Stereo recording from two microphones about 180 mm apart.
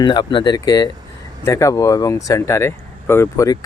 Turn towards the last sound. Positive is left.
turn(degrees=20)  # may be behind; listen again after turning